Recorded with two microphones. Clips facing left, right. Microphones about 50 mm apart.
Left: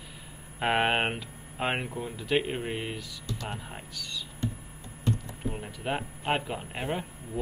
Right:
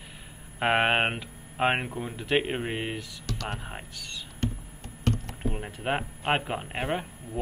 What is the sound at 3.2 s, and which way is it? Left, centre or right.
Speech, right.